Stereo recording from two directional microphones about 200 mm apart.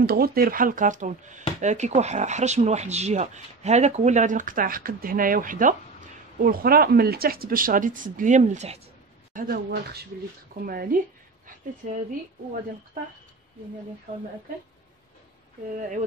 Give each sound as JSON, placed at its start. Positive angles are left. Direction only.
{"t": 0.0, "sound": "speech", "side_deg": -50}
{"t": 9.3, "sound": "speech", "side_deg": -45}